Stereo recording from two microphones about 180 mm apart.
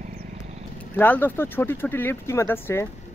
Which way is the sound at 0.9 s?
10° left (ahead or behind).